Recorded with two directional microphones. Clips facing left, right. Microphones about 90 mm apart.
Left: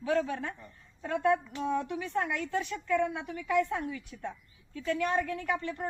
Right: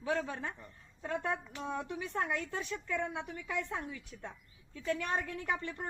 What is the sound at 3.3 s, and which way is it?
Speech, 90° left.